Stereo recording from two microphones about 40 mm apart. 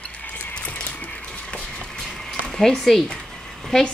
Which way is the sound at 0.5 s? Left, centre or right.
Left.